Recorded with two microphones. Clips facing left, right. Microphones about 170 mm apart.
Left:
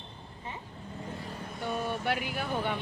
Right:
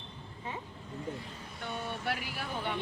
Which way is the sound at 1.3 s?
60° left (ahead or behind).